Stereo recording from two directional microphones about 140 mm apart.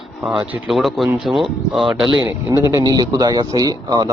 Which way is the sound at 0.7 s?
Centre (ahead or behind).